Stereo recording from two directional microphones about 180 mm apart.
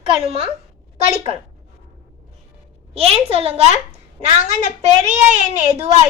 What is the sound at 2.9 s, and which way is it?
A woman's voice, 35° right (ahead or behind).